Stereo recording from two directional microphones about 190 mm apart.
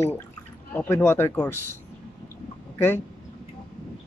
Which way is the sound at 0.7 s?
10° left (ahead or behind).